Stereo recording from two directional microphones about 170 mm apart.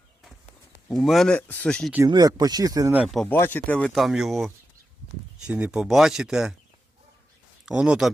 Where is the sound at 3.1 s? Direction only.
5° left (ahead or behind).